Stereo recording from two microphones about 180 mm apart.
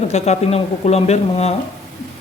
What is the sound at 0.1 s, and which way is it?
Speech, 35° left (ahead or behind).